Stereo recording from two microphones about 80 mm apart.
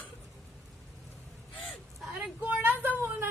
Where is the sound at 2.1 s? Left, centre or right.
Right.